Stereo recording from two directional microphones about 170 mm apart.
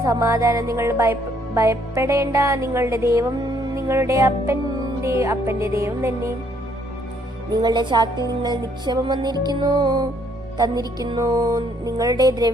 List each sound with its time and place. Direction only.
0.0 s music: 20° right (ahead or behind)
7.5 s music: 25° right (ahead or behind)